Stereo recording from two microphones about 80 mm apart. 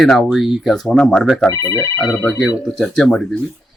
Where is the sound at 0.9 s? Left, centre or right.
Centre.